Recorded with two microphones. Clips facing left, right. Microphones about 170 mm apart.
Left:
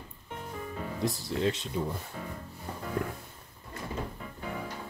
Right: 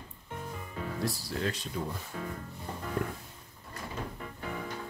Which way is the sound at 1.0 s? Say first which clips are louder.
Left 5 dB; 20° left (ahead or behind).